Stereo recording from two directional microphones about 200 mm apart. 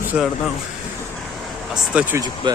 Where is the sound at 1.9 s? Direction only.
10° right (ahead or behind).